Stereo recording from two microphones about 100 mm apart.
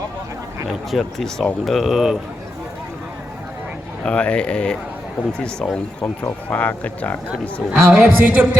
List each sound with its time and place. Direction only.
0.9 s speech: centre (ahead or behind)
4.0 s speech: 10° left (ahead or behind)
7.7 s a woman's voice: 15° right (ahead or behind)